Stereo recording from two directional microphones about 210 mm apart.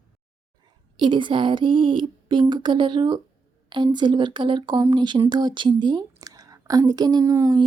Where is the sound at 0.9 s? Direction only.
20° right (ahead or behind).